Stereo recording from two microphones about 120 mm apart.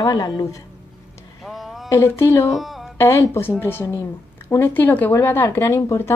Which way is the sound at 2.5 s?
Centre (ahead or behind).